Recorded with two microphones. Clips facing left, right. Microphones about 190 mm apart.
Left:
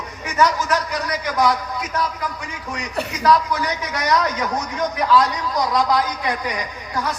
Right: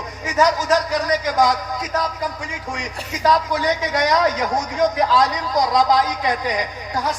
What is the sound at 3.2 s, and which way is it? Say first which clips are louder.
A man's voice: even; 40° right (ahead or behind).